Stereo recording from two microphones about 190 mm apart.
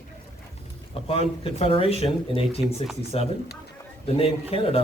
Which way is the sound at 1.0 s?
30° left (ahead or behind).